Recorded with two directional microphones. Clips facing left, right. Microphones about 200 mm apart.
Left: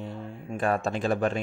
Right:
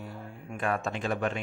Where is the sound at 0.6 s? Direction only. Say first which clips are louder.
Left 4 dB; 35° left (ahead or behind).